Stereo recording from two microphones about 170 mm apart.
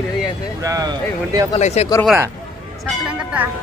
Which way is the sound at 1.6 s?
40° left (ahead or behind).